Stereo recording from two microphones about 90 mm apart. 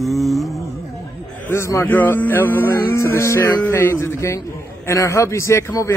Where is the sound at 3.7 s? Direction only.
30° left (ahead or behind).